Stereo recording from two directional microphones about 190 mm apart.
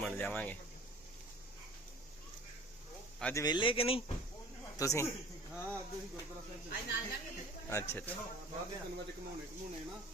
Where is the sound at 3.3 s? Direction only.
20° left (ahead or behind).